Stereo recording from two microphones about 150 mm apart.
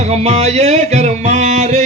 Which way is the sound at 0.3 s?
45° right (ahead or behind).